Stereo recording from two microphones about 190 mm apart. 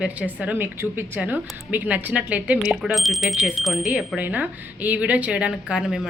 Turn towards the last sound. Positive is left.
turn(degrees=-5)  # may be behind; listen again after turning